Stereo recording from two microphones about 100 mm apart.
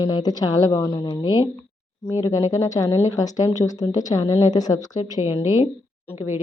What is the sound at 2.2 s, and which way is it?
A woman's voice, 35° left (ahead or behind).